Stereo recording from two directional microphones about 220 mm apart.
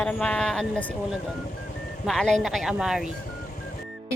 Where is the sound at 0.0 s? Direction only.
5° left (ahead or behind).